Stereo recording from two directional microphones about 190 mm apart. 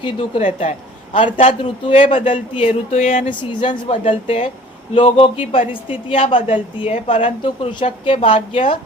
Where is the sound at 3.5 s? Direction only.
25° left (ahead or behind).